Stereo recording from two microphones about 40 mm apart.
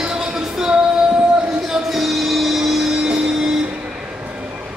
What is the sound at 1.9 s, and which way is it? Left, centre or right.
Music, centre.